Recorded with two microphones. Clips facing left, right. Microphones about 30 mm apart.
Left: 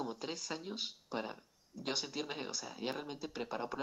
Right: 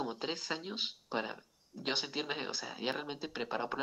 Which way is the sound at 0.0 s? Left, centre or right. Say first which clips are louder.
Right 3 dB; right.